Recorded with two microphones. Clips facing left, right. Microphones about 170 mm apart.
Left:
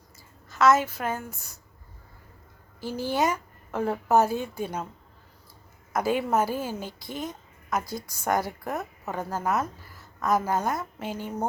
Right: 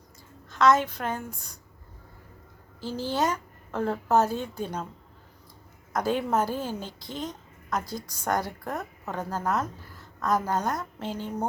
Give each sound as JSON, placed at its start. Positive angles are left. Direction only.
{"t": 0.4, "sound": "a woman's voice", "side_deg": 5}
{"t": 2.8, "sound": "a woman's voice", "side_deg": 10}
{"t": 5.9, "sound": "a woman's voice", "side_deg": 10}